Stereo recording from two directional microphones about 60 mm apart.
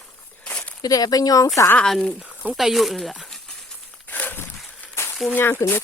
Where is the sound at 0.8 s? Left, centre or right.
Left.